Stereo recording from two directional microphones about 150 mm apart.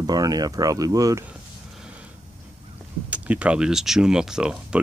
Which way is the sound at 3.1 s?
10° right (ahead or behind).